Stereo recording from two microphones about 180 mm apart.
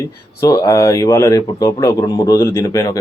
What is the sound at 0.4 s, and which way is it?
Speech, 20° left (ahead or behind).